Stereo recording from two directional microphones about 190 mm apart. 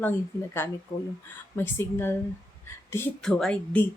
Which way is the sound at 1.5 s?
10° left (ahead or behind).